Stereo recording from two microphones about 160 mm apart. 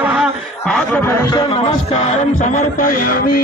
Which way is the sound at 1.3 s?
35° left (ahead or behind).